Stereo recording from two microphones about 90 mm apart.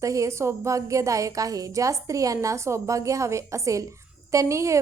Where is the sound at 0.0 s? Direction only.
35° right (ahead or behind).